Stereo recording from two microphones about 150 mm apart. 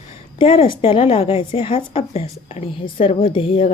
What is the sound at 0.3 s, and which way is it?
A woman's voice, 35° left (ahead or behind).